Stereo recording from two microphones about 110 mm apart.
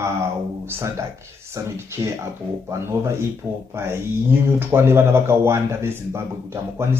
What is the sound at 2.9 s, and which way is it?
Speech, 25° right (ahead or behind).